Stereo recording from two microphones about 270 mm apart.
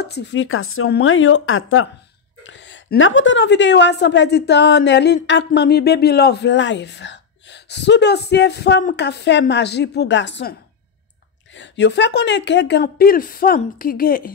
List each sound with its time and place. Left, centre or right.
0.0 s a woman's voice: left
11.5 s a woman's voice: left